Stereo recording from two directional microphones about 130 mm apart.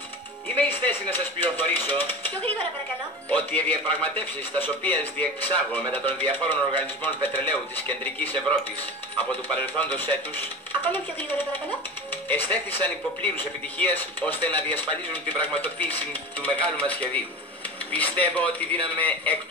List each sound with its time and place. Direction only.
0.6 s speech: 15° left (ahead or behind)
9.6 s speech: 15° left (ahead or behind)